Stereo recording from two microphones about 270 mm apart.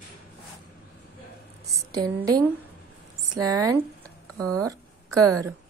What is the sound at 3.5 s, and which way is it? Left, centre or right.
Speech, centre.